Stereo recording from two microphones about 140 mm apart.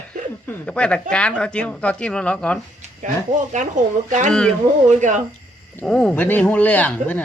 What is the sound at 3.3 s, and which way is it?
Speech, 60° right (ahead or behind).